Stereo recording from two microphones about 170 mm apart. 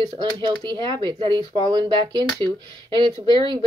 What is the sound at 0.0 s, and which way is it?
Speech, 25° right (ahead or behind).